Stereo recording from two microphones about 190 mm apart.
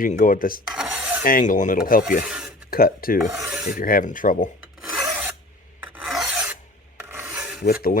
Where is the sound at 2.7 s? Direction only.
50° left (ahead or behind).